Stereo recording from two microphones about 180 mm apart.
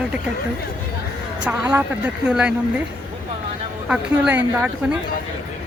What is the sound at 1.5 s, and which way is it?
A woman's voice, 10° right (ahead or behind).